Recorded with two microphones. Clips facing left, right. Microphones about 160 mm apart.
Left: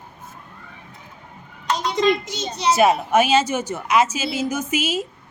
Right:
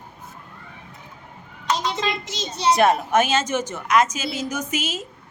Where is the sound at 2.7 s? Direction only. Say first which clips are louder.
Left 1 dB; 5° left (ahead or behind).